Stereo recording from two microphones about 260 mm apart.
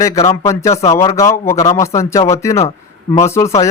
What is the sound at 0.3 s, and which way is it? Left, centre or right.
Speech, centre.